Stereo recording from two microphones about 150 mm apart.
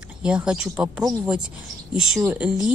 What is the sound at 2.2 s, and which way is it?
Speech, 15° right (ahead or behind).